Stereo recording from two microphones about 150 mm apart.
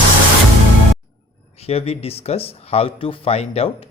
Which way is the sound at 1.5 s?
40° left (ahead or behind).